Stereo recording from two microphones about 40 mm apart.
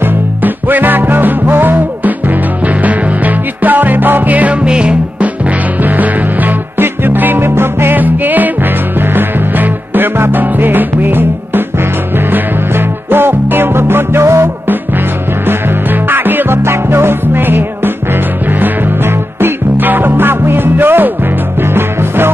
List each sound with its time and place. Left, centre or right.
0.4 s music: right
4.6 s music: right
5.2 s music: right
6.8 s music: right
7.9 s music: right
14.7 s music: right
16.6 s music: right